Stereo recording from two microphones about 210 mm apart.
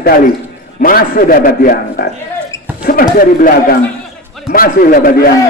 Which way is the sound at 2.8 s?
45° left (ahead or behind).